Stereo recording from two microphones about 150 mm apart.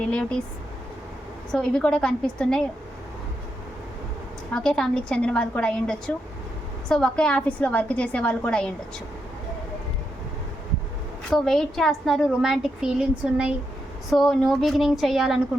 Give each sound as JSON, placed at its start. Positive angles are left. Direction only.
{"t": 0.1, "sound": "a woman's voice", "side_deg": 5}
{"t": 1.5, "sound": "a woman's voice", "side_deg": 5}
{"t": 4.5, "sound": "a woman's voice", "side_deg": 5}
{"t": 11.3, "sound": "a woman's voice", "side_deg": 0}